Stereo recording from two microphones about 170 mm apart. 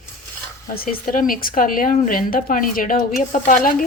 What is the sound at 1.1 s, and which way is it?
Speech, 55° left (ahead or behind).